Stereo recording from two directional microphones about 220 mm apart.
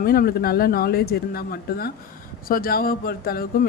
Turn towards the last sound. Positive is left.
turn(degrees=45)  # may be behind; listen again after turning